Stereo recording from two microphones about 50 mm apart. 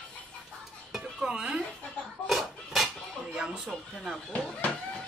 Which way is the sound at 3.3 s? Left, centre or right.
Centre.